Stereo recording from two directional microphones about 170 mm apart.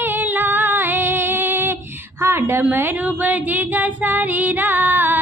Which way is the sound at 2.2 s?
15° right (ahead or behind).